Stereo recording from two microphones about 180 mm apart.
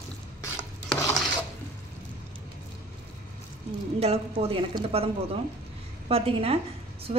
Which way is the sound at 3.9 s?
35° right (ahead or behind).